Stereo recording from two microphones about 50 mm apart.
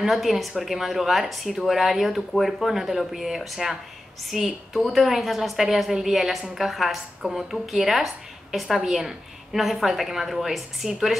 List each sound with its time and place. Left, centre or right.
0.0 s a woman's voice: centre